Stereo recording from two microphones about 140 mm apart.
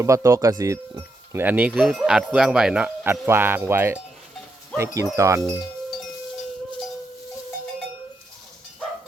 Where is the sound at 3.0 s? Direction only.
15° right (ahead or behind).